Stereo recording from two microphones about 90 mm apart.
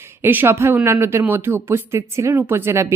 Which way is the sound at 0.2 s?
25° right (ahead or behind).